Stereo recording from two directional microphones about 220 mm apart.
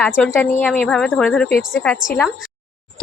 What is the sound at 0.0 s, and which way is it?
A woman's voice, 5° left (ahead or behind).